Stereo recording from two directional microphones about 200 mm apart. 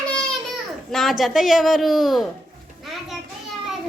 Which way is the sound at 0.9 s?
Centre (ahead or behind).